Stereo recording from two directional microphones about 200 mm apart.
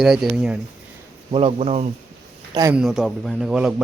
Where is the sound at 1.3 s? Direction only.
30° right (ahead or behind).